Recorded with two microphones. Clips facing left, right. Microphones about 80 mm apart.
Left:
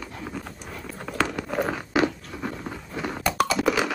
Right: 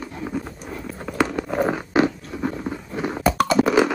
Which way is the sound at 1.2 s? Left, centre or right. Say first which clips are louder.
Right 5 dB; centre.